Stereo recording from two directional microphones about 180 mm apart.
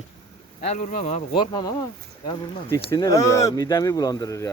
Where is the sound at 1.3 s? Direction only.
25° left (ahead or behind).